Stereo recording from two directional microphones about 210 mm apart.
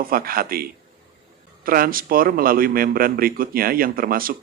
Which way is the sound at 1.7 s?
45° right (ahead or behind).